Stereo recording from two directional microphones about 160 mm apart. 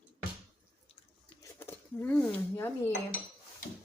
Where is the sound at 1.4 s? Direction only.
15° left (ahead or behind).